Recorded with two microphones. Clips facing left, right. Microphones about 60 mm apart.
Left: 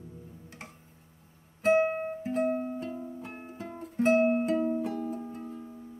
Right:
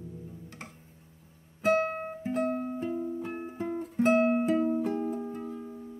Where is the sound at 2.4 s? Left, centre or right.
Centre.